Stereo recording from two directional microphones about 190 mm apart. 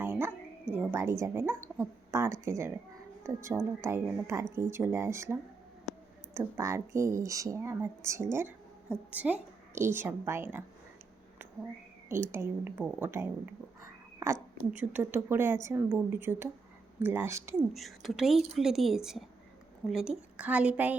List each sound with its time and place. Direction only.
0.0 s a sound: 10° right (ahead or behind)
0.7 s speech: 10° right (ahead or behind)
12.0 s speech: 15° right (ahead or behind)
14.6 s speech: 10° right (ahead or behind)
17.7 s speech: centre (ahead or behind)